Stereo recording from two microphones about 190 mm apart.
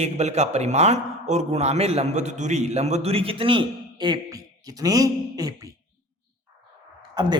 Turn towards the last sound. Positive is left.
turn(degrees=-20)  # may be behind; listen again after turning